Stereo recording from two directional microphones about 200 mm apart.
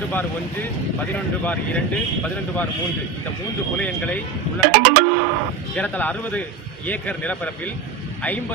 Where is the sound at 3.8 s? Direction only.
5° left (ahead or behind).